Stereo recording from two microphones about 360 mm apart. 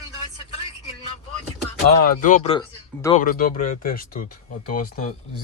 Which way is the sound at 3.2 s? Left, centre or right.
Left.